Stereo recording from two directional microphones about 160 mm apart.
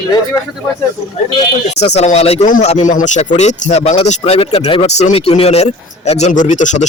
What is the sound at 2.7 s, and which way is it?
Speech, 45° left (ahead or behind).